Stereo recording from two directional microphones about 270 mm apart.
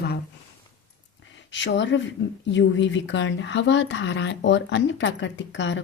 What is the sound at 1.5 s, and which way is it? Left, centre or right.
Speech, left.